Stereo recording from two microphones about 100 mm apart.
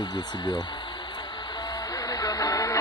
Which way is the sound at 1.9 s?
35° left (ahead or behind).